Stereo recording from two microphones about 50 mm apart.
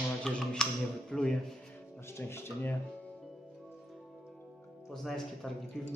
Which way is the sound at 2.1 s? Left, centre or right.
Left.